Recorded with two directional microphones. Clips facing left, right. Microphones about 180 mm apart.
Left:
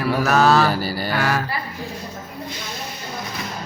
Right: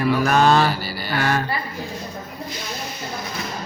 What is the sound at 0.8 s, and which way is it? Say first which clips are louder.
Mantra: left 5 dB; 45° left (ahead or behind).